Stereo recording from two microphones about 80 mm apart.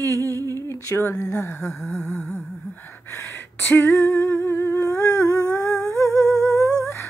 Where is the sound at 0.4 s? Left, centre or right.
Right.